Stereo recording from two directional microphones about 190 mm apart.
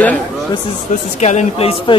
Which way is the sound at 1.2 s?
35° left (ahead or behind).